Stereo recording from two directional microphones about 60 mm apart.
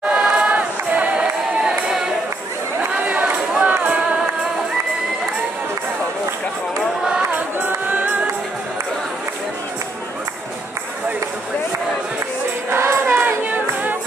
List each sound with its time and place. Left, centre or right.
0.1 s crowd: centre
0.5 s a sound: right
3.6 s music: right
7.8 s music: right
12.6 s music: right
13.3 s music: right